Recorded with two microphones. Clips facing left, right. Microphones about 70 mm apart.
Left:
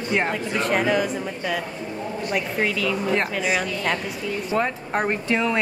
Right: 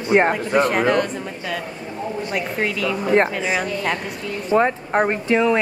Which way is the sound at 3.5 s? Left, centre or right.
Centre.